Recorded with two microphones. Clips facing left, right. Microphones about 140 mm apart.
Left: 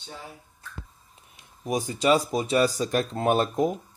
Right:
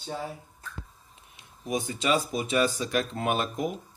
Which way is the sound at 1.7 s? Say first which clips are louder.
Left 4 dB; 40° left (ahead or behind).